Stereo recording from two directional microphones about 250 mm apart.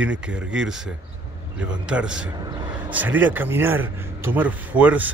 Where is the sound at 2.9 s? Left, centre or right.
Centre.